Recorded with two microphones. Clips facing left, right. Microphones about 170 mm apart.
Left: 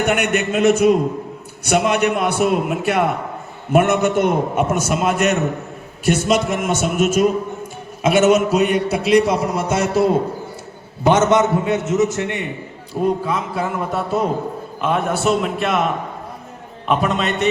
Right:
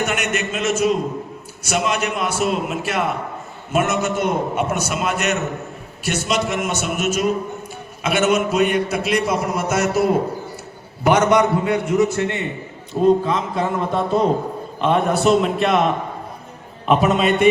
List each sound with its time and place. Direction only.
0.0 s a man's voice: 60° left (ahead or behind); by 15.8 s centre (ahead or behind)
16.8 s a man's voice: 5° right (ahead or behind)